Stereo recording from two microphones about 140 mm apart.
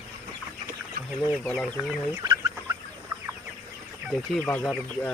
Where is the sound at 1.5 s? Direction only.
5° right (ahead or behind).